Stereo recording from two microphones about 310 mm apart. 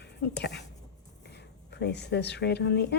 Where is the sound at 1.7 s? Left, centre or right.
Left.